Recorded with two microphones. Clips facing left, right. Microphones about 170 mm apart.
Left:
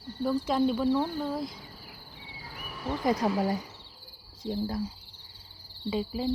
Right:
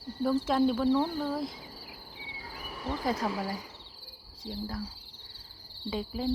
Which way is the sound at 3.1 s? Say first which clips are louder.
Left 6 dB; 20° left (ahead or behind).